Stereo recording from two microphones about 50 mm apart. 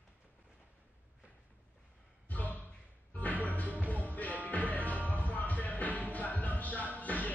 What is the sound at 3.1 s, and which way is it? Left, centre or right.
Music, left.